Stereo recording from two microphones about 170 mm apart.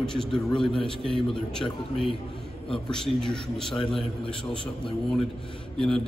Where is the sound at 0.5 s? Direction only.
30° left (ahead or behind).